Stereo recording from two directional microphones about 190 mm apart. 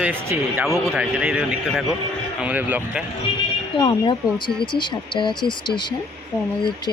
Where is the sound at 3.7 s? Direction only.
25° left (ahead or behind).